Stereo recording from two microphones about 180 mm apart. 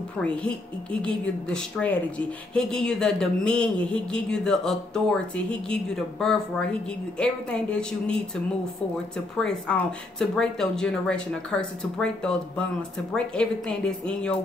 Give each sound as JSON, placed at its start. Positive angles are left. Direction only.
{"t": 1.0, "sound": "a woman's voice", "side_deg": 5}
{"t": 9.4, "sound": "a woman's voice", "side_deg": 5}